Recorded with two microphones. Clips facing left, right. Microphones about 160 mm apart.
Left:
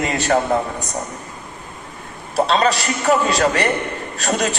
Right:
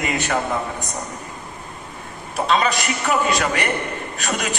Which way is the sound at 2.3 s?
35° left (ahead or behind).